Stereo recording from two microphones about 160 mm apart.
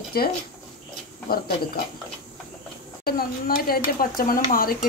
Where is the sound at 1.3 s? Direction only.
70° left (ahead or behind).